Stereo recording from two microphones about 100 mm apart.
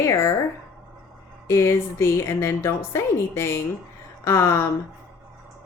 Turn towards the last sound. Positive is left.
turn(degrees=25)  # may be behind; listen again after turning